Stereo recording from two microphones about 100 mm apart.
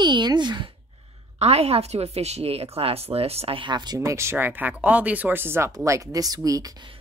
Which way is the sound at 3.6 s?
45° right (ahead or behind).